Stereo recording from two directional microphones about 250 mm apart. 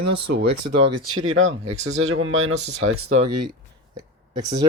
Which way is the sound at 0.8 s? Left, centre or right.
Right.